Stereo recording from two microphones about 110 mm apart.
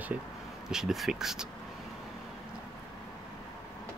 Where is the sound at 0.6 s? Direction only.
5° right (ahead or behind).